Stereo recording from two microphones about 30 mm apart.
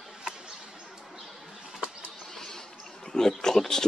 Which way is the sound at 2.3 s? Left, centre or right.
Centre.